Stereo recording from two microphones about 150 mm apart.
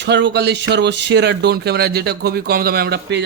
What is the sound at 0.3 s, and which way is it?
A man's voice, 90° right.